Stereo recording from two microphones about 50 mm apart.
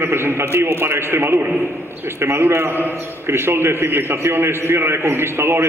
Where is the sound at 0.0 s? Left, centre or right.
Right.